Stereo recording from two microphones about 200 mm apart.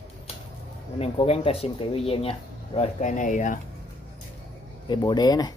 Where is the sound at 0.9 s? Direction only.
30° left (ahead or behind).